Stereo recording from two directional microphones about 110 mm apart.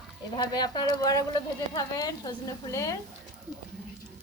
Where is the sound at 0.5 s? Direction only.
40° left (ahead or behind).